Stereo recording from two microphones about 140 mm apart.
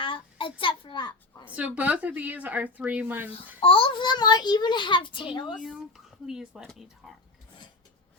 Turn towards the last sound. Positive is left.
turn(degrees=0)  # may be behind; listen again after turning